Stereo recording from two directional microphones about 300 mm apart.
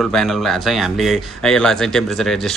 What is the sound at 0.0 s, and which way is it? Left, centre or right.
A man's voice, centre.